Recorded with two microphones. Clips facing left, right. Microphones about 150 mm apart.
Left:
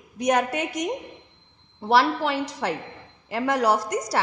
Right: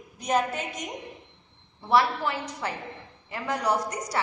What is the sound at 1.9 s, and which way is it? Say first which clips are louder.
A woman's voice: left 3 dB; 80° left.